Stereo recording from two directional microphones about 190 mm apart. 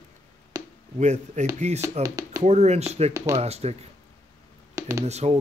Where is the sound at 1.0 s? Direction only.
40° right (ahead or behind).